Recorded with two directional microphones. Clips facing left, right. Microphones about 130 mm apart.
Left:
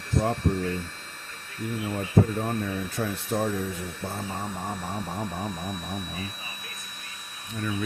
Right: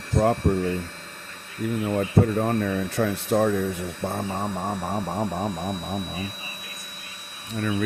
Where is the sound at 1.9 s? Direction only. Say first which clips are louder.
Right 2 dB; 70° right (ahead or behind).